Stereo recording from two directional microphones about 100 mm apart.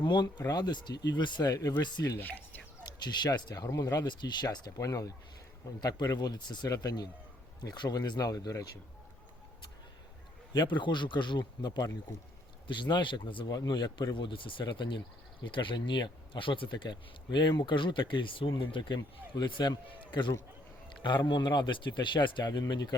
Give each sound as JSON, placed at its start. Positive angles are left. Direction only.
{"t": 0.0, "sound": "speech", "side_deg": 45}
{"t": 1.5, "sound": "speech", "side_deg": 35}
{"t": 3.0, "sound": "speech", "side_deg": 45}
{"t": 10.5, "sound": "speech", "side_deg": 50}
{"t": 13.5, "sound": "speech", "side_deg": 40}